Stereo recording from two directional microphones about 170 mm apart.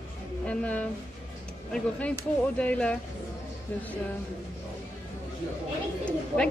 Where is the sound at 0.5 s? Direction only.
10° left (ahead or behind).